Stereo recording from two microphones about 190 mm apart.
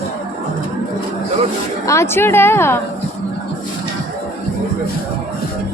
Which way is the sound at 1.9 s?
15° left (ahead or behind).